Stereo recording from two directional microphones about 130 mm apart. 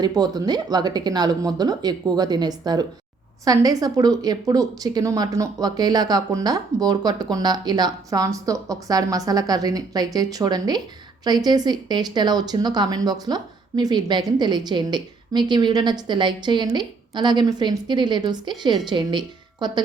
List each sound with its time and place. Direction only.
0.0 s speech: 30° right (ahead or behind)